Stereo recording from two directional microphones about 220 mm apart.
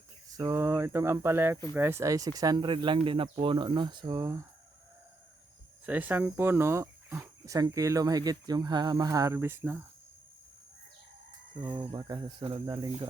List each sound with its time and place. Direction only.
0.3 s speech: 15° right (ahead or behind)
5.8 s speech: 5° right (ahead or behind)
11.6 s speech: 20° right (ahead or behind)